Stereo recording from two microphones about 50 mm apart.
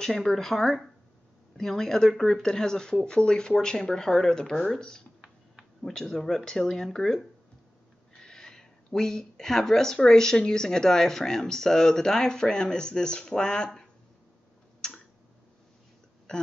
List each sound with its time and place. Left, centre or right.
0.0 s speech: centre
5.2 s a sound: centre
5.9 s speech: centre
14.8 s tick-tock: centre